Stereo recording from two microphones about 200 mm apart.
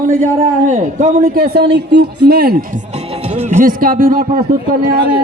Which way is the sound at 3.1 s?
35° right (ahead or behind).